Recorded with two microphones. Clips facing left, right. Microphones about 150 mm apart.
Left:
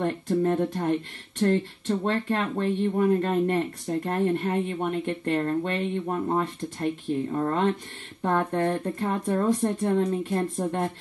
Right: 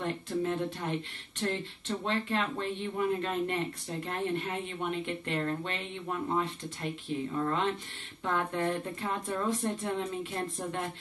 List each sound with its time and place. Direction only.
0.0 s speech: 45° left (ahead or behind)